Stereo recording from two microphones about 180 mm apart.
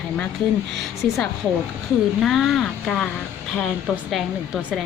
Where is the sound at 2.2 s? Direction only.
Centre (ahead or behind).